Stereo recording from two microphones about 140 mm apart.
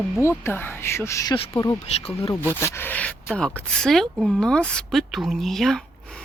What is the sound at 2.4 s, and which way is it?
A woman's voice, 15° left (ahead or behind).